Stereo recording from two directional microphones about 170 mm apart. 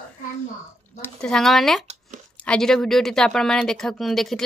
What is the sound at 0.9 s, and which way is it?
Speech, 5° left (ahead or behind).